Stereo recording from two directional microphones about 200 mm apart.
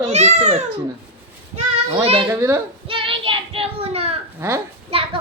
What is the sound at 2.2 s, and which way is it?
Speech, 15° right (ahead or behind).